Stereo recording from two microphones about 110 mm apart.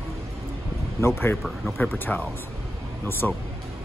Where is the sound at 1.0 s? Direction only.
20° left (ahead or behind).